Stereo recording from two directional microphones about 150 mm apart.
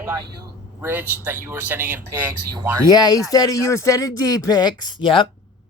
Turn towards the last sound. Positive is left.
turn(degrees=35)  # may be behind; listen again after turning